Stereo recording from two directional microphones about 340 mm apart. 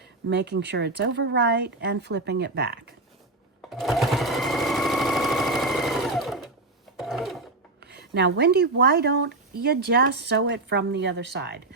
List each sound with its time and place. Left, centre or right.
0.3 s speech: right
3.7 s sewing machine: centre
6.9 s filing: centre
7.8 s speech: right